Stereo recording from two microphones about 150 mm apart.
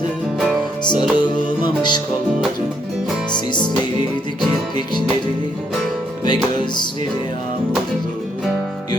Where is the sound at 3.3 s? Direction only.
30° left (ahead or behind).